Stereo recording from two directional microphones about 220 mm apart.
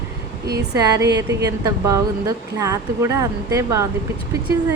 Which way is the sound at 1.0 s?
50° right (ahead or behind).